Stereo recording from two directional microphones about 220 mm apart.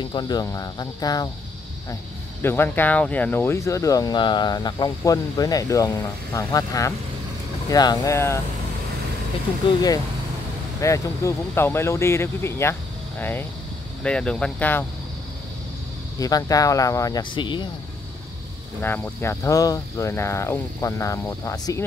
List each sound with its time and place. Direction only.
0.0 s speech: 20° left (ahead or behind)
2.4 s speech: 10° left (ahead or behind)
9.6 s speech: 20° left (ahead or behind)
16.2 s speech: 15° left (ahead or behind)
18.8 s speech: 10° left (ahead or behind)